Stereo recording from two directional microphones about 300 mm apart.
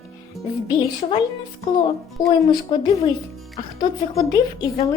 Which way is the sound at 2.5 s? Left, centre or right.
Centre.